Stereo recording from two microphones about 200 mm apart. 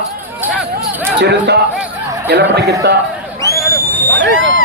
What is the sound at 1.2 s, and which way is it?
Speech, 60° right (ahead or behind).